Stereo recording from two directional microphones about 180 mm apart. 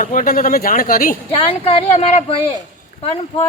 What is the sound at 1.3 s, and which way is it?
Speech, 30° left (ahead or behind).